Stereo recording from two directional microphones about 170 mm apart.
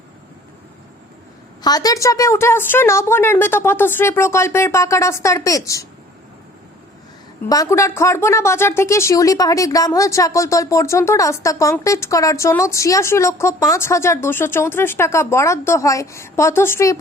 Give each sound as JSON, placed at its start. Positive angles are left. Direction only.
{"t": 1.6, "sound": "a woman's voice", "side_deg": 20}
{"t": 7.4, "sound": "a woman's voice", "side_deg": 20}